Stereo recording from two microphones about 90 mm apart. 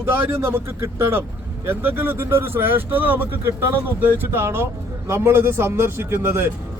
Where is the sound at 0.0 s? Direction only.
25° right (ahead or behind).